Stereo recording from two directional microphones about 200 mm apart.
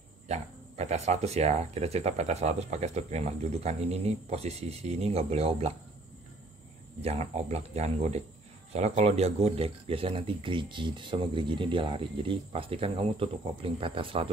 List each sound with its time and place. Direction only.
0.3 s speech: 35° right (ahead or behind)
7.0 s speech: 30° right (ahead or behind)